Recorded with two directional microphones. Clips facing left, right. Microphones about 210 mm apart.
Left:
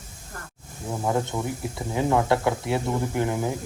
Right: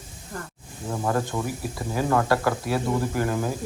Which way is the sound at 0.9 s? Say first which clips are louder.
Even; 10° left (ahead or behind).